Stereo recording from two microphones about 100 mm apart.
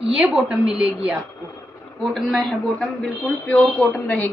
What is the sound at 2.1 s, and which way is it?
A man's voice, 5° left (ahead or behind).